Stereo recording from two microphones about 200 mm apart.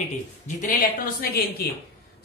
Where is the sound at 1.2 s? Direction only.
50° left (ahead or behind).